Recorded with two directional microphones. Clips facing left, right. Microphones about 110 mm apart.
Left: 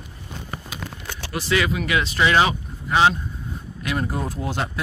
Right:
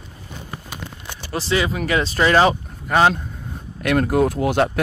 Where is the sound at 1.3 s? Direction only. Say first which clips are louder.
Right 1 dB; 30° right (ahead or behind); by 3.1 s 50° right (ahead or behind).